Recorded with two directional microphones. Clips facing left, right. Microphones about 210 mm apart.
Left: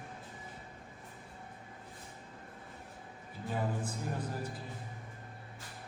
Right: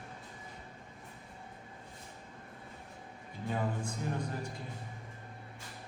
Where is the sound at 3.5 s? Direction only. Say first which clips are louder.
Right 1 dB; 5° left (ahead or behind).